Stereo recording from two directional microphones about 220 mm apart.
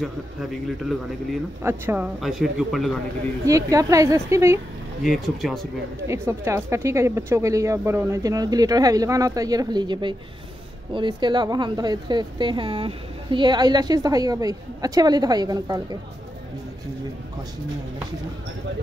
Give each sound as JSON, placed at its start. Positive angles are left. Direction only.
{"t": 1.6, "sound": "speech", "side_deg": -10}
{"t": 3.4, "sound": "speech", "side_deg": -15}
{"t": 5.0, "sound": "speech", "side_deg": 0}
{"t": 6.0, "sound": "speech", "side_deg": -10}